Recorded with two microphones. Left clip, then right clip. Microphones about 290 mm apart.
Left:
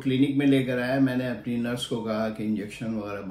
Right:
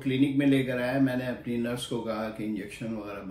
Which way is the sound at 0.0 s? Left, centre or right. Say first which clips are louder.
Left 2 dB; centre.